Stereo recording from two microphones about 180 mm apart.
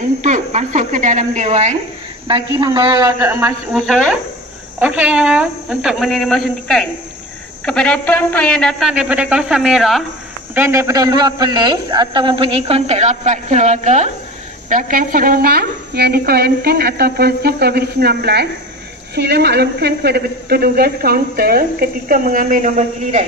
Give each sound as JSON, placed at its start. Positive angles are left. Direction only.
{"t": 0.2, "sound": "speech", "side_deg": -40}
{"t": 2.2, "sound": "a man's voice", "side_deg": -30}
{"t": 3.1, "sound": "a man's voice", "side_deg": -15}
{"t": 3.7, "sound": "a man's voice", "side_deg": 0}
{"t": 4.7, "sound": "a man's voice", "side_deg": -10}
{"t": 10.5, "sound": "a man's voice", "side_deg": -15}